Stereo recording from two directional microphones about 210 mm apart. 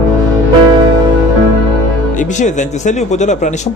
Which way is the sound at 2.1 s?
35° left (ahead or behind).